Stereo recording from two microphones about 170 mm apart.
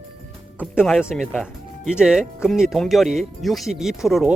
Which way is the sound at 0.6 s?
Centre (ahead or behind).